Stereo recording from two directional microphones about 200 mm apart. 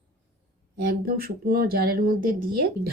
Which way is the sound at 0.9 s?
45° right (ahead or behind).